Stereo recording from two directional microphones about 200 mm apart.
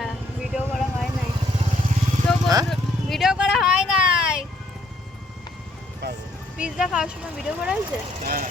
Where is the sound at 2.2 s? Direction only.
5° left (ahead or behind).